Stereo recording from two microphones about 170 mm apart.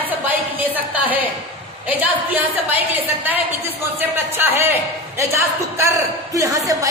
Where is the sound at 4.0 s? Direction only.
10° right (ahead or behind).